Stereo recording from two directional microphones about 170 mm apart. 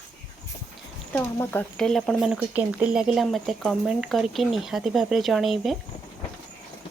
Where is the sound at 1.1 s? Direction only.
10° left (ahead or behind).